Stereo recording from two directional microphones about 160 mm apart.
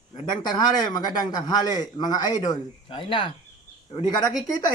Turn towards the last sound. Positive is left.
turn(degrees=25)  # may be behind; listen again after turning